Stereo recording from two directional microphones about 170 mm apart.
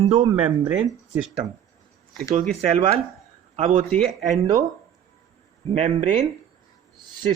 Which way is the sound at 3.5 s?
40° right (ahead or behind).